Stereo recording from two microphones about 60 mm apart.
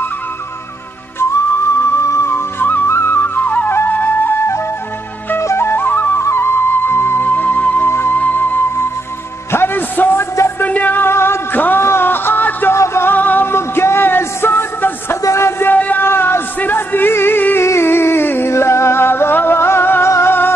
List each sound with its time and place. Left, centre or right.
2.0 s music: left
2.6 s flute: left
5.4 s flute: left
6.1 s music: left
10.6 s a sound: left
11.8 s music: left
12.7 s music: left
13.1 s music: left
15.2 s music: left
15.6 s a sound: left
16.1 s a sound: left
18.5 s music: left